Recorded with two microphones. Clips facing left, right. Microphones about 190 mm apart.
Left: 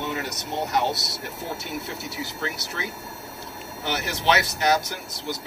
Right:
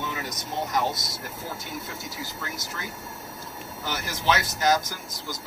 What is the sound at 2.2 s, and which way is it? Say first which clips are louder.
Speech: left 4 dB; 70° left (ahead or behind).